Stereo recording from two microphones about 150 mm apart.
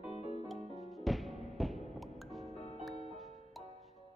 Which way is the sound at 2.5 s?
45° left (ahead or behind).